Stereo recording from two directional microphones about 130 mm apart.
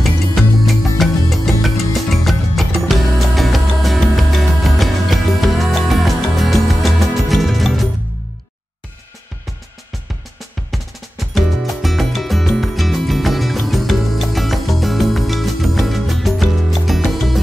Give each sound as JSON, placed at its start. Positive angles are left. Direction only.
{"t": 0.0, "sound": "music", "side_deg": 0}
{"t": 10.7, "sound": "music", "side_deg": 0}